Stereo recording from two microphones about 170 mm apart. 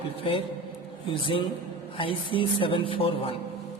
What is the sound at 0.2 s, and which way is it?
Speech, 30° left (ahead or behind).